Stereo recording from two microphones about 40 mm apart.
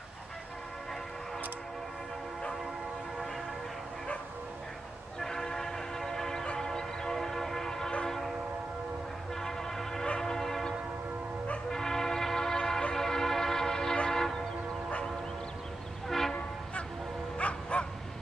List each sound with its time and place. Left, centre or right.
5.2 s train: centre
9.3 s vehicle: centre
10.2 s train horn: centre
11.7 s train: centre
14.0 s vehicle: centre
16.1 s train: centre
17.4 s bow-wow: left